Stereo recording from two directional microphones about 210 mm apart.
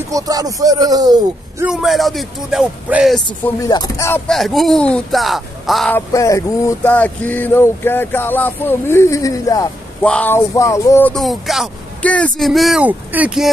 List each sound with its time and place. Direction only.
0.1 s speech: 15° right (ahead or behind)
1.7 s speech: centre (ahead or behind)
3.4 s a sound: 15° left (ahead or behind)
4.3 s speech: centre (ahead or behind)
5.9 s a sound: 15° left (ahead or behind)
10.0 s speech: 5° left (ahead or behind)